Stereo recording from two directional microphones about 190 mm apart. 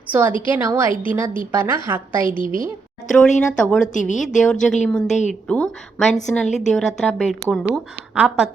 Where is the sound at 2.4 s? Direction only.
45° right (ahead or behind).